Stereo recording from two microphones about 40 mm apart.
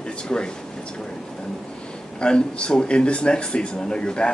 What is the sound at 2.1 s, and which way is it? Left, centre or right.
A man's voice, left.